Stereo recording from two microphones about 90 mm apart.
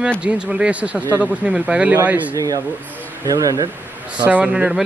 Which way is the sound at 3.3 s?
40° right (ahead or behind).